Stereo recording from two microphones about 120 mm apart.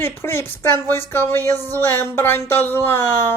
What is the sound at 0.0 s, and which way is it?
Speech, 20° left (ahead or behind).